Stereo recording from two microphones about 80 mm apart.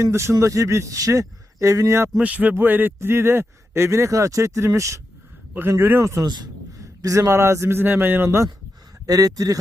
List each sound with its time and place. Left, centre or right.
0.0 s a man's voice: right
2.1 s a man's voice: centre; by 4.9 s right
5.5 s a man's voice: right
9.0 s speech: right